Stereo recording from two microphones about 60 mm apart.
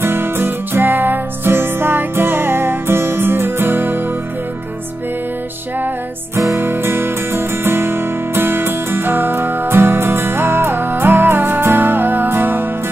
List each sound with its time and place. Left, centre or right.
0.0 s music: right
6.3 s music: right